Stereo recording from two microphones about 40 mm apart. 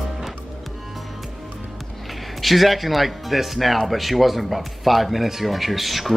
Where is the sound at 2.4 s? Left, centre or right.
Centre.